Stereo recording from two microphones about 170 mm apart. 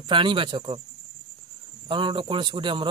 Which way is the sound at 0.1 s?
30° right (ahead or behind).